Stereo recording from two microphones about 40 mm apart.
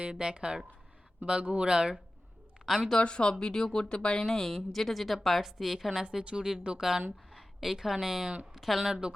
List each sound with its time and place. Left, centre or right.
0.0 s speech: right
2.6 s speech: centre
3.0 s speech: left
3.3 s a woman's voice: centre
8.9 s speech: centre